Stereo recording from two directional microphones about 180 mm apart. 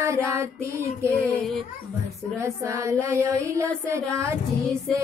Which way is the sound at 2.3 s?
15° right (ahead or behind).